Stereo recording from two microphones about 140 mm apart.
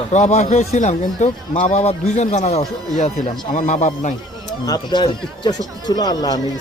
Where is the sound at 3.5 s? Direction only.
60° left (ahead or behind).